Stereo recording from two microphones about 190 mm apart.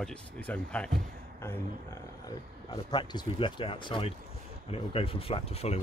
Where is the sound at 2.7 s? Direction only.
25° left (ahead or behind).